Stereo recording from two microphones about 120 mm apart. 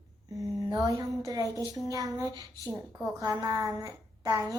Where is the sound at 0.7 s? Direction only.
30° right (ahead or behind).